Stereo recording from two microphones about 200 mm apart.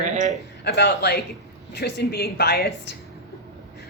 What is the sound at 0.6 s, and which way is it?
A woman's voice, 55° left (ahead or behind).